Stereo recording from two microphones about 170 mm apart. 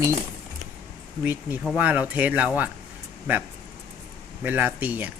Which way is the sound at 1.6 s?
5° right (ahead or behind).